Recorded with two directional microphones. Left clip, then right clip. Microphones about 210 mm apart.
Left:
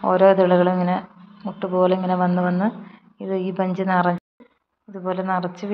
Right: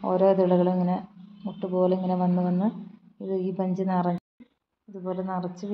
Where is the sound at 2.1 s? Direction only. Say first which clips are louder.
Left 7 dB; 20° left (ahead or behind).